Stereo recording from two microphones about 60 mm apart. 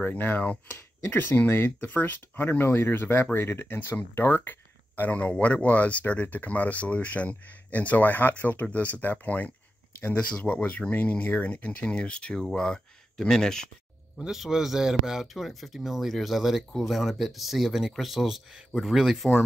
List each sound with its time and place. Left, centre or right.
0.0 s speech: left; by 13.7 s centre
14.1 s speech: centre